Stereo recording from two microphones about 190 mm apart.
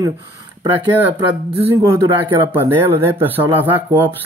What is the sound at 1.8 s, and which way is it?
Speech, 15° right (ahead or behind).